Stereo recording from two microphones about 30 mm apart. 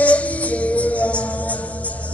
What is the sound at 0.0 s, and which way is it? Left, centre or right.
Music, left.